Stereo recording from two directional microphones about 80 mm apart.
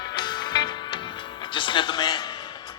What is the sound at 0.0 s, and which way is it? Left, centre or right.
Music, left.